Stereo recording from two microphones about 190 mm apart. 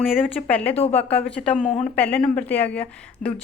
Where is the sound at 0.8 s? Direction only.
35° left (ahead or behind).